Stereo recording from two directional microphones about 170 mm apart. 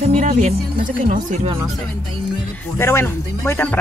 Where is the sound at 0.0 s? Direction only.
50° right (ahead or behind).